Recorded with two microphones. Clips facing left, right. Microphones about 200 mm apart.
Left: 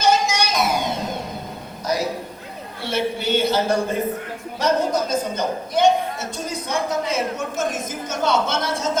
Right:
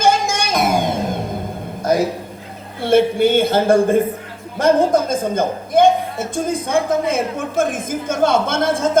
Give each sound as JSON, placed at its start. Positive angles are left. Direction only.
{"t": 0.0, "sound": "music", "side_deg": -50}
{"t": 1.8, "sound": "a sound", "side_deg": -50}
{"t": 2.8, "sound": "a man's voice", "side_deg": -50}